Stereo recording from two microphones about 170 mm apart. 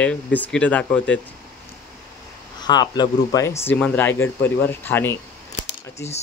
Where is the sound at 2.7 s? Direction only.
25° left (ahead or behind).